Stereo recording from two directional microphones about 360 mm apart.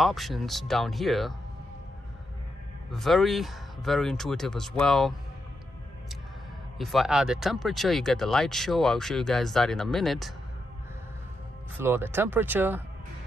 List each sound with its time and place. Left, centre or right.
0.0 s speech: centre
2.9 s speech: centre
6.8 s speech: centre
11.8 s speech: centre